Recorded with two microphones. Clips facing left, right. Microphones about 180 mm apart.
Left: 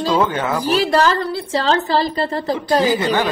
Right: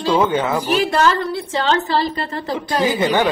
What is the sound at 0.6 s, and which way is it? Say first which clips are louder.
A woman's voice: left 4 dB; 35° left (ahead or behind).